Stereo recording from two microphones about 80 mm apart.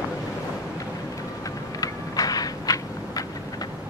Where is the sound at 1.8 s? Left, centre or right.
Left.